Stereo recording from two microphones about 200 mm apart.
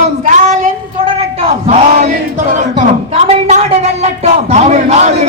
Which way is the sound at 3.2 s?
30° right (ahead or behind).